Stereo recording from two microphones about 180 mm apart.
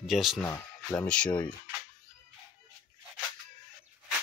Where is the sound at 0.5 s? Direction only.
15° left (ahead or behind).